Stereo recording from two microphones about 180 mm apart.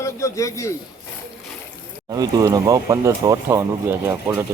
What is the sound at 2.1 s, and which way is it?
Speech, 20° right (ahead or behind).